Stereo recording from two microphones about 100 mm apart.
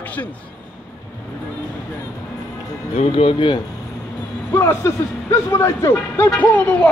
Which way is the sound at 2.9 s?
75° left (ahead or behind).